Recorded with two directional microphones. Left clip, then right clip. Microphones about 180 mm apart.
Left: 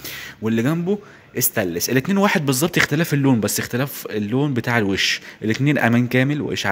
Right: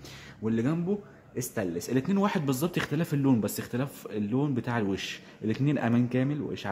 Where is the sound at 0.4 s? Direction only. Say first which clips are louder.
Left 8 dB; 25° left (ahead or behind).